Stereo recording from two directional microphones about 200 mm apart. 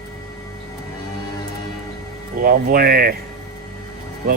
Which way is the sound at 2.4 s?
45° right (ahead or behind).